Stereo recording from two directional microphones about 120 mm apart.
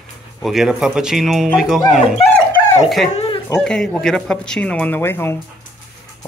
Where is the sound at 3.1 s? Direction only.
50° left (ahead or behind).